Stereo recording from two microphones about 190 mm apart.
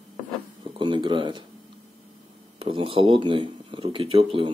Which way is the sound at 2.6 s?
30° right (ahead or behind).